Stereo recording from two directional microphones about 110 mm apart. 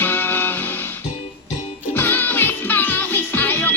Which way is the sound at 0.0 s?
20° left (ahead or behind).